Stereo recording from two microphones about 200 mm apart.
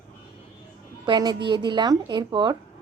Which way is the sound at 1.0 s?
20° right (ahead or behind).